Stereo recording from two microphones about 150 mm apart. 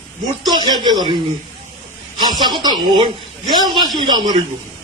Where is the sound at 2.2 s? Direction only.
30° right (ahead or behind).